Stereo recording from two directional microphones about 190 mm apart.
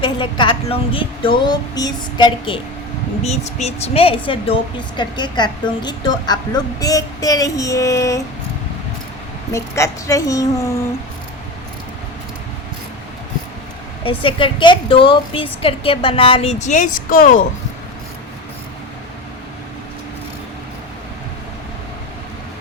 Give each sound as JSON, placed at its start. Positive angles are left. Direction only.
{"t": 0.0, "sound": "a woman's voice", "side_deg": 25}
{"t": 3.2, "sound": "a woman's voice", "side_deg": 35}
{"t": 9.5, "sound": "a woman's voice", "side_deg": 15}
{"t": 14.0, "sound": "a woman's voice", "side_deg": 25}